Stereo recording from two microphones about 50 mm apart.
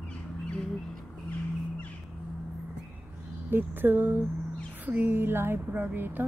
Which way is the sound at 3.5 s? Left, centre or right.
Right.